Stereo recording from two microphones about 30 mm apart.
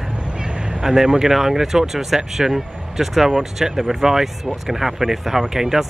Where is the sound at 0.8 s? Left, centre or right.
Centre.